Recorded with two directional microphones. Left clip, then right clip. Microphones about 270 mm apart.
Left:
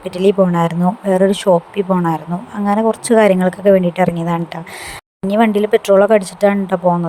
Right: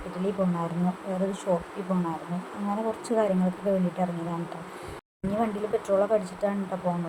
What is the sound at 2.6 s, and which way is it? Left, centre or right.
Speech, left.